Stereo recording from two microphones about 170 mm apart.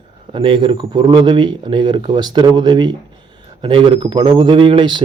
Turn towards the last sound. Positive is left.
turn(degrees=-30)  # may be behind; listen again after turning